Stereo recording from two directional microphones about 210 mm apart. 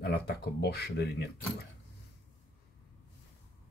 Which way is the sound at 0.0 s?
50° left (ahead or behind).